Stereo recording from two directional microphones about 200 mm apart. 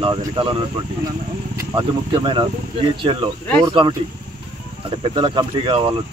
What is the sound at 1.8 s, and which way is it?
Speech, 25° right (ahead or behind).